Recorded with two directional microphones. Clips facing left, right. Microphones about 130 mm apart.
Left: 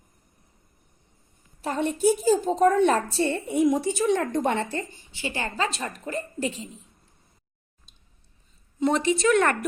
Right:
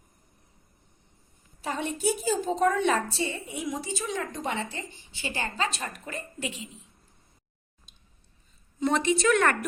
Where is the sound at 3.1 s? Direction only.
60° left (ahead or behind).